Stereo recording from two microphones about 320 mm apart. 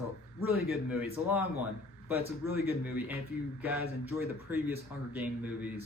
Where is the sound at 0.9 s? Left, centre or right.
Centre.